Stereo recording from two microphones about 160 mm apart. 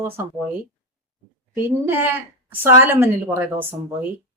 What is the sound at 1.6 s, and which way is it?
Speech, 15° right (ahead or behind).